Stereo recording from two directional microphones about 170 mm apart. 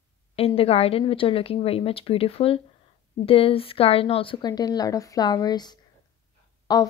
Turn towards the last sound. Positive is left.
turn(degrees=25)  # may be behind; listen again after turning